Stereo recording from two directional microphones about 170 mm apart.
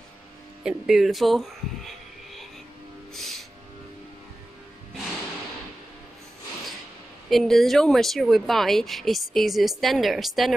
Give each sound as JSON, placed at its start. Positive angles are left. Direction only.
{"t": 0.7, "sound": "speech", "side_deg": 0}
{"t": 3.2, "sound": "music", "side_deg": 0}
{"t": 7.2, "sound": "speech", "side_deg": 0}